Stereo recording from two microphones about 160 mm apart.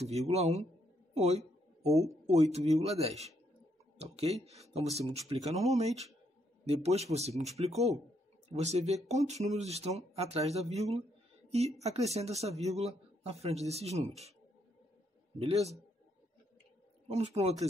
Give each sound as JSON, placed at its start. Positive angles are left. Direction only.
{"t": 0.0, "sound": "a man's voice", "side_deg": -45}
{"t": 15.3, "sound": "a man's voice", "side_deg": -40}
{"t": 17.1, "sound": "a man's voice", "side_deg": -40}